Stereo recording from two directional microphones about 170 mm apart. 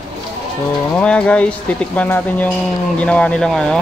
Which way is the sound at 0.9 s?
5° left (ahead or behind).